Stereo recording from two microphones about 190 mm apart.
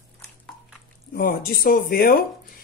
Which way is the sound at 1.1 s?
50° left (ahead or behind).